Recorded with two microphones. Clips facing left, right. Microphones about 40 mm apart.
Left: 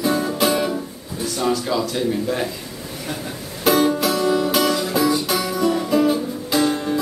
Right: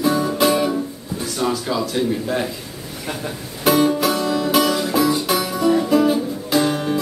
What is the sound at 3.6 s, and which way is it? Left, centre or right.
Music, centre.